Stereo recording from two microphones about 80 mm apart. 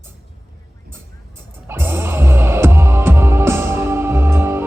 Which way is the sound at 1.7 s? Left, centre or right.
Right.